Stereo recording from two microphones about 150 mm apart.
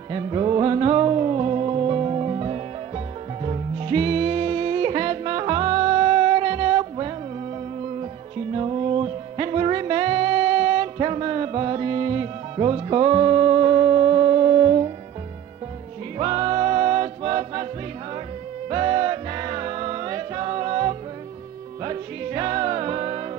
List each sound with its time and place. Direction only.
0.1 s music: 35° right (ahead or behind)
8.5 s music: 35° right (ahead or behind)
16.2 s music: 35° right (ahead or behind)
18.7 s music: 40° right (ahead or behind)